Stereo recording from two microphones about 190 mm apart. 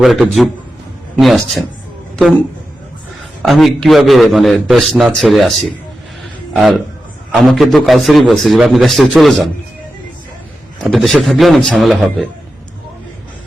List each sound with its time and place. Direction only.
0.0 s a man's voice: centre (ahead or behind)
3.4 s a man's voice: centre (ahead or behind)
10.8 s a man's voice: centre (ahead or behind)